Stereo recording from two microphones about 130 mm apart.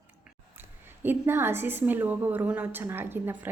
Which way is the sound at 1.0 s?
15° right (ahead or behind).